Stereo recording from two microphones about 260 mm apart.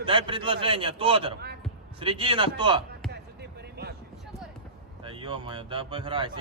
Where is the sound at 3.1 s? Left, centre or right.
Right.